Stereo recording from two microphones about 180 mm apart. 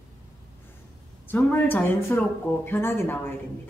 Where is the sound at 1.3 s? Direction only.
10° left (ahead or behind).